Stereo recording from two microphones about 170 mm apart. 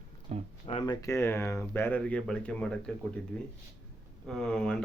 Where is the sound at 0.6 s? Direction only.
30° left (ahead or behind).